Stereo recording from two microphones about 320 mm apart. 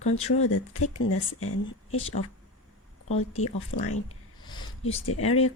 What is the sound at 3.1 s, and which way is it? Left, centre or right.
Speech, centre.